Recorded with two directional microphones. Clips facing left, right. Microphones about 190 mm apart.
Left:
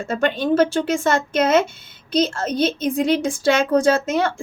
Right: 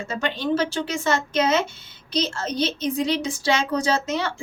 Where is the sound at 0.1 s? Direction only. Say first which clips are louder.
Left 5 dB; 55° left (ahead or behind).